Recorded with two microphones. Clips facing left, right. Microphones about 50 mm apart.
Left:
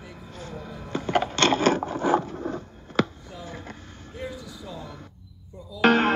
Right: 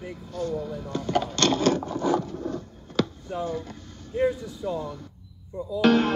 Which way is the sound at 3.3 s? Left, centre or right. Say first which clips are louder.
Right 10 dB; right.